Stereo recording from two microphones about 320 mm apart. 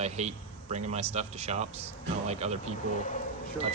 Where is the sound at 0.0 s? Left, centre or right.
Right.